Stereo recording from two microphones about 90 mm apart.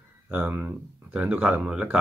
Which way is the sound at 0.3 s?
15° right (ahead or behind).